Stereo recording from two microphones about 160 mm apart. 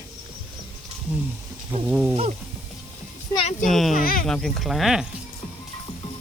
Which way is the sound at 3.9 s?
65° left (ahead or behind).